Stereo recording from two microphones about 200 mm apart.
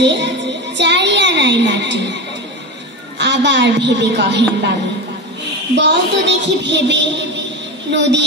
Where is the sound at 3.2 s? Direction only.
60° right (ahead or behind).